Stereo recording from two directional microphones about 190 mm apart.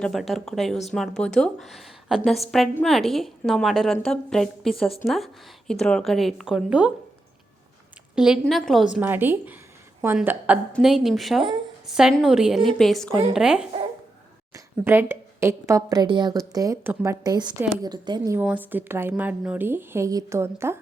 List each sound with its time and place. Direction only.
0.0 s speech: centre (ahead or behind)
8.1 s speech: 5° right (ahead or behind)
14.5 s a sound: 10° right (ahead or behind)
15.1 s a woman's voice: 15° right (ahead or behind)
18.3 s speech: 10° right (ahead or behind)